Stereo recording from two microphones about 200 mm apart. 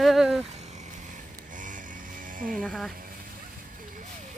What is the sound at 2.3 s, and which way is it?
Speech, 45° right (ahead or behind).